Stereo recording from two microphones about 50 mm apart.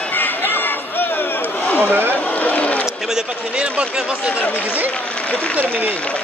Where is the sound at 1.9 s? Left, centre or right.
Right.